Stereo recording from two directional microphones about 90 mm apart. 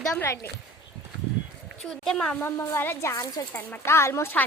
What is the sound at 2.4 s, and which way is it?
Speech, 25° left (ahead or behind).